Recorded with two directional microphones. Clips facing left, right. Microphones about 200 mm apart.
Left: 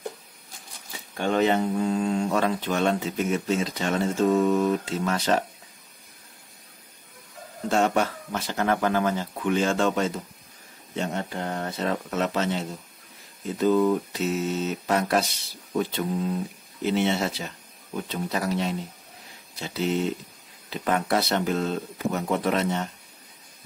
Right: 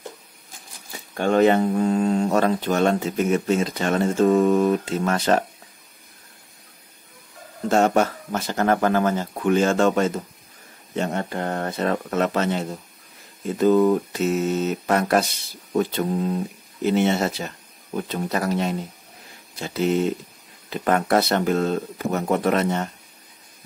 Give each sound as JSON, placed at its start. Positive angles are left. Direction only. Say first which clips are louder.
{"t": 1.1, "sound": "speech", "louder": "right 5 dB", "side_deg": -50}
{"t": 7.7, "sound": "speech", "louder": "right 4 dB", "side_deg": -45}